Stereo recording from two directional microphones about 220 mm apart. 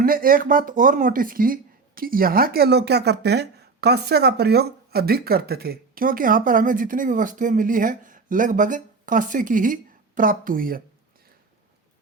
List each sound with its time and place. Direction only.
0.0 s speech: 40° right (ahead or behind)